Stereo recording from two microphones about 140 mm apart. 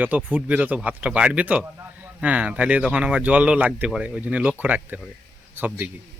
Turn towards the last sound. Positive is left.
turn(degrees=-15)  # may be behind; listen again after turning